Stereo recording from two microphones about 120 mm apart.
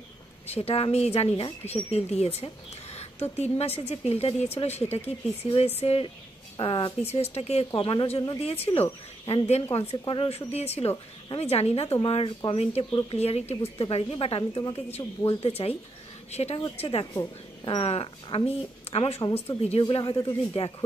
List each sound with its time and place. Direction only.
0.5 s a woman's voice: 55° left (ahead or behind)
17.0 s speech: 35° left (ahead or behind)
17.7 s a woman's voice: 55° left (ahead or behind)
19.8 s speech: 45° left (ahead or behind)